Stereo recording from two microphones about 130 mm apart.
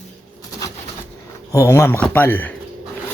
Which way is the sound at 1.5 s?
20° left (ahead or behind).